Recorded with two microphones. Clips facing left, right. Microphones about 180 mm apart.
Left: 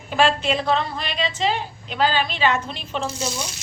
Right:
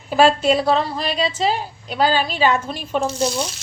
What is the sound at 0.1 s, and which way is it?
A woman's voice, 40° right (ahead or behind).